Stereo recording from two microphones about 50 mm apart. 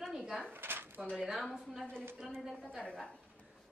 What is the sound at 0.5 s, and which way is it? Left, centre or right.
Drawer open or close, right.